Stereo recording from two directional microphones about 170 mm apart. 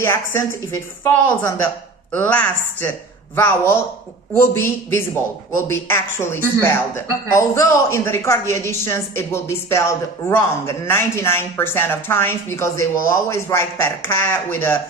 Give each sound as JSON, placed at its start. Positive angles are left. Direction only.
{"t": 0.0, "sound": "speech", "side_deg": 15}